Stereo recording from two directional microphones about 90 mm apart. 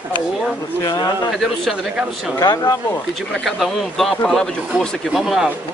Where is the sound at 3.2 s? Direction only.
Centre (ahead or behind).